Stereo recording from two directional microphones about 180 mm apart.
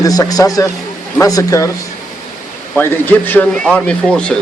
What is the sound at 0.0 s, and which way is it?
A man's voice, 20° left (ahead or behind).